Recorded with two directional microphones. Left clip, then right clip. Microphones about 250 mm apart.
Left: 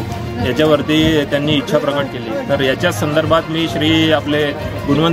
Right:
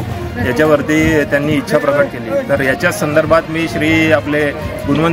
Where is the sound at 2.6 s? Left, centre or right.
Centre.